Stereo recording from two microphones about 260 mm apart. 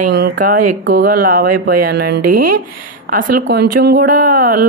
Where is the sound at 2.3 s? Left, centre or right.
Right.